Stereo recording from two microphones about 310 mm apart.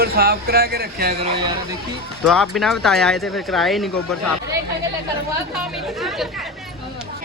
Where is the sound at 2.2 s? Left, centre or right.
Centre.